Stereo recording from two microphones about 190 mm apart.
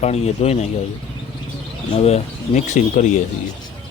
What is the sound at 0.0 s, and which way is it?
Speech, 35° left (ahead or behind).